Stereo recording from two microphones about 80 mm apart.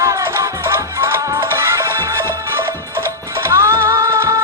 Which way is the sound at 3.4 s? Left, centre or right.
Right.